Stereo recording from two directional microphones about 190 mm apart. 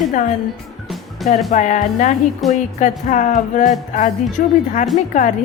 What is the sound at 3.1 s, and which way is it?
A woman's voice, 40° left (ahead or behind).